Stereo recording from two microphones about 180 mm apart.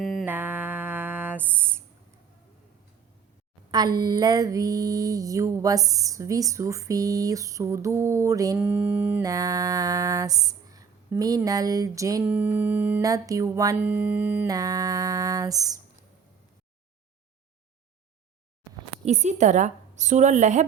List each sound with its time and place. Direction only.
0.0 s music: centre (ahead or behind)
0.3 s a sound: 10° right (ahead or behind)
3.7 s mantra: 25° right (ahead or behind)
13.1 s speech: 20° right (ahead or behind)
14.5 s mantra: 20° right (ahead or behind)
19.0 s a woman's voice: 40° right (ahead or behind)